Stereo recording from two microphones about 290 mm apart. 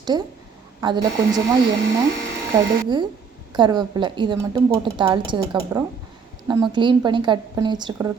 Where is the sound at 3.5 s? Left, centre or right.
Centre.